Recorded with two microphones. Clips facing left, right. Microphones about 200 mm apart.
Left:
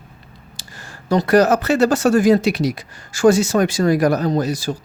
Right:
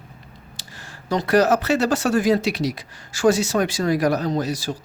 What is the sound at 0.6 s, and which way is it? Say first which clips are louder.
Speech: left 4 dB; 45° left (ahead or behind).